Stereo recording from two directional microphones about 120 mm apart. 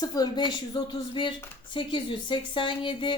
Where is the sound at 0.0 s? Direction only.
35° left (ahead or behind).